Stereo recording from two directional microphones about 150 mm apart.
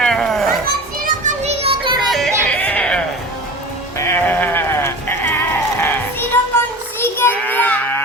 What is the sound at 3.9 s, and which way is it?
Sheep, 15° left (ahead or behind).